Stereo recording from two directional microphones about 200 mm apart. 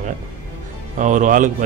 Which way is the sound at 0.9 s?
40° right (ahead or behind).